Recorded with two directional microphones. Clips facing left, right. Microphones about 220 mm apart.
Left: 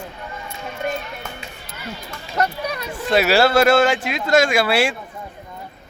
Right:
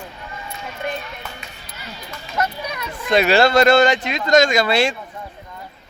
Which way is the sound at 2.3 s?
35° left (ahead or behind).